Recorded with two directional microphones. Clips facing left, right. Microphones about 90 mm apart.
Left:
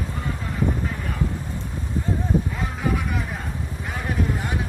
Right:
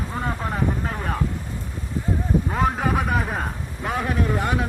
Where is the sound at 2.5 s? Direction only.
50° right (ahead or behind).